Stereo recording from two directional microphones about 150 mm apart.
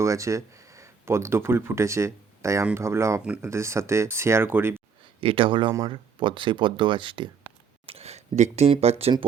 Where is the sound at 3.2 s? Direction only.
5° right (ahead or behind).